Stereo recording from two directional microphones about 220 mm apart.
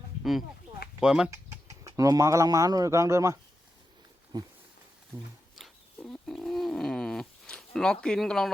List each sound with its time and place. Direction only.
0.9 s speech: centre (ahead or behind)
1.8 s speech: 15° right (ahead or behind)
4.3 s a sound: 20° right (ahead or behind)
5.5 s wild animals: centre (ahead or behind)